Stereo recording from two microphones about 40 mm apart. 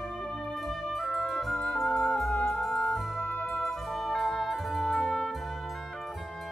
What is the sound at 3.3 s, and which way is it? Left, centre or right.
Music, left.